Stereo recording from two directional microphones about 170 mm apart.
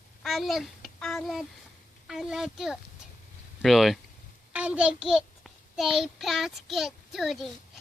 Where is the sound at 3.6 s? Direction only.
Centre (ahead or behind).